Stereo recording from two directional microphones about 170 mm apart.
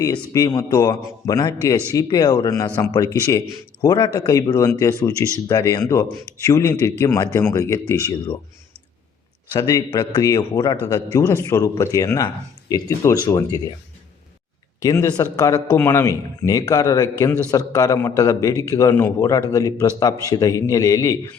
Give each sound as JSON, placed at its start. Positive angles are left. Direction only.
{"t": 0.0, "sound": "a man's voice", "side_deg": 20}
{"t": 9.5, "sound": "a man's voice", "side_deg": 20}
{"t": 14.8, "sound": "a man's voice", "side_deg": 20}